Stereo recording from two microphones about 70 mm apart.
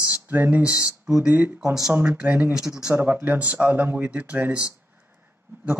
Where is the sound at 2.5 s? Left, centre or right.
Centre.